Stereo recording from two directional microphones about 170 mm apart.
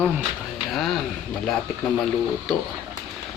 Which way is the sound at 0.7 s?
Centre (ahead or behind).